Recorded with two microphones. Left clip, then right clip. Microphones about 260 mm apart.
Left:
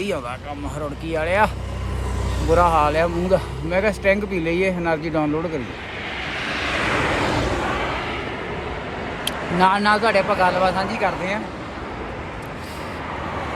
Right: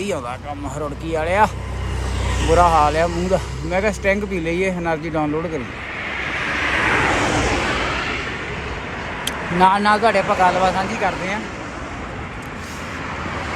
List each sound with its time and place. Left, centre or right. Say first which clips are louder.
1.1 s a man's voice: right 2 dB; centre
2.5 s a man's voice: right 2 dB; centre
6.1 s vehicle: right 4 dB; right
9.2 s a man's voice: right 3 dB; centre